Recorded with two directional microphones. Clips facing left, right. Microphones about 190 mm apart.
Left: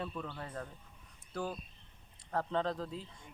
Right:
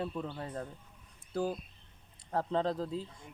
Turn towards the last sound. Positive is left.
turn(degrees=-30)  # may be behind; listen again after turning